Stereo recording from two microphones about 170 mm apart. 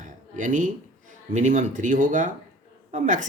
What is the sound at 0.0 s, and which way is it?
Speech, 50° right (ahead or behind).